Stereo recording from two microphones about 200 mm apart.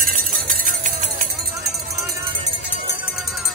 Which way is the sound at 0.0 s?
45° right (ahead or behind).